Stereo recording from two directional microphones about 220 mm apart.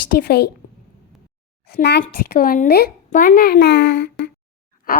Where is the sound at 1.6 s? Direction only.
45° left (ahead or behind).